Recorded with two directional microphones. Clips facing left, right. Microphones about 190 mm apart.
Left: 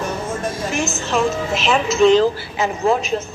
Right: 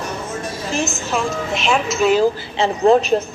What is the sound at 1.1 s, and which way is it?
Speech, centre (ahead or behind).